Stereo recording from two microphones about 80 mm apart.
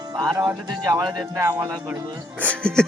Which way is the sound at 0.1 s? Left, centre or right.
Right.